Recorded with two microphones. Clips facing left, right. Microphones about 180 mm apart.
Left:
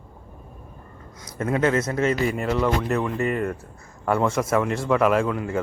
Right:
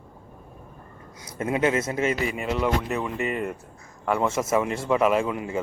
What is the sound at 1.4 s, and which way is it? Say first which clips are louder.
Speech: left 2 dB; 15° right (ahead or behind).